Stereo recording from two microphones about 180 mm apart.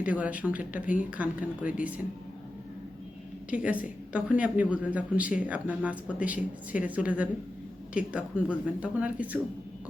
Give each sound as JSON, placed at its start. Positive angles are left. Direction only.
{"t": 0.0, "sound": "a woman's voice", "side_deg": -10}
{"t": 3.5, "sound": "a woman's voice", "side_deg": -10}